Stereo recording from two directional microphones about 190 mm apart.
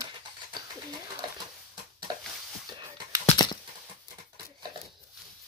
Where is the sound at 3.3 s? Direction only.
20° left (ahead or behind).